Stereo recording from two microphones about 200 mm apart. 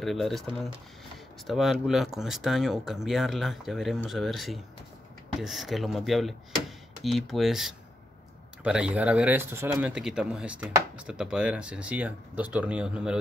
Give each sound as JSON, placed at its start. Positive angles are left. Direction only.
{"t": 0.0, "sound": "speech", "side_deg": 0}
{"t": 1.5, "sound": "speech", "side_deg": 0}